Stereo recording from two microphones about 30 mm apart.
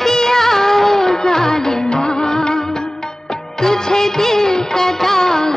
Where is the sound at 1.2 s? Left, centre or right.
Centre.